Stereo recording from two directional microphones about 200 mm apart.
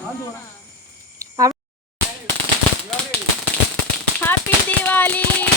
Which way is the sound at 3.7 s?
10° left (ahead or behind).